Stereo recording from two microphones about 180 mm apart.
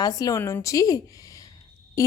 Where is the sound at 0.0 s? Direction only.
20° left (ahead or behind).